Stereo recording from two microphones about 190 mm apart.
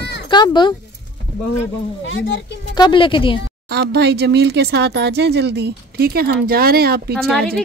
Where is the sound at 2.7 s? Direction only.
25° left (ahead or behind).